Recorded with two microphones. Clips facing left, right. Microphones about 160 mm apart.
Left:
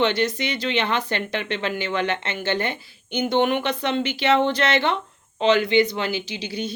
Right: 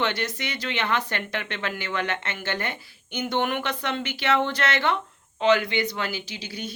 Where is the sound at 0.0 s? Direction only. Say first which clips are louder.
Left 6 dB; 25° left (ahead or behind).